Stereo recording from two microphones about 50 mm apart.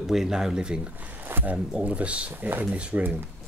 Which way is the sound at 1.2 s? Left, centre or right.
Right.